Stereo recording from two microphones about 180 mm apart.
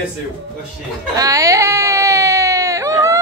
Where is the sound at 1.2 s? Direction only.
20° right (ahead or behind).